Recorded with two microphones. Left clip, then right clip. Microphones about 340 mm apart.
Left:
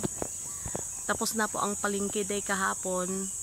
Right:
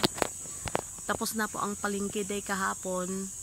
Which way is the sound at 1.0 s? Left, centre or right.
Centre.